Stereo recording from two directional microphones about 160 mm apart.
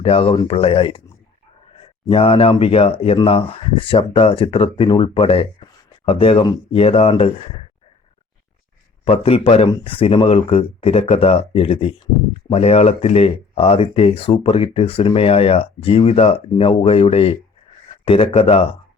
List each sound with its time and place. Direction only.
0.0 s speech: 35° left (ahead or behind)
9.0 s speech: 35° left (ahead or behind)